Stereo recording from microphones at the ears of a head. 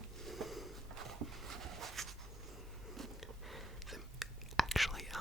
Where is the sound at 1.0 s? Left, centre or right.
Right.